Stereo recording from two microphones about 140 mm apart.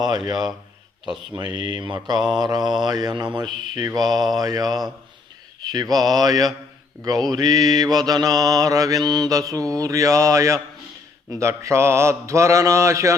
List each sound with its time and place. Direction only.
1.4 s speech: 30° right (ahead or behind)
2.1 s mantra: 5° right (ahead or behind)
2.4 s mantra: 30° right (ahead or behind)